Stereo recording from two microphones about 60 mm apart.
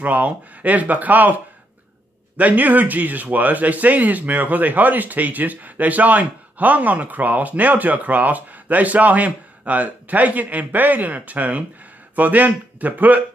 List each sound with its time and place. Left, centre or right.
0.0 s speech: right
2.3 s speech: right